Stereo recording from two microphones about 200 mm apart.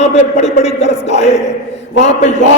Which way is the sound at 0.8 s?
35° left (ahead or behind).